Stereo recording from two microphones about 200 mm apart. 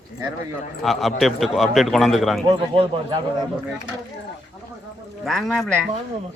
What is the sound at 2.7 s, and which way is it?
Speech, 30° right (ahead or behind).